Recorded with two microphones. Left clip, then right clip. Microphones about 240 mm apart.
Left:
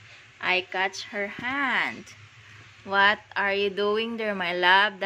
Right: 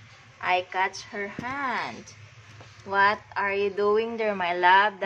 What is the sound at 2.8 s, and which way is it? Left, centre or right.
A woman's voice, left.